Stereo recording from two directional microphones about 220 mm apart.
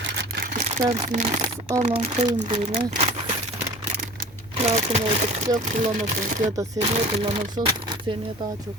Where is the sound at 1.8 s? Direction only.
30° right (ahead or behind).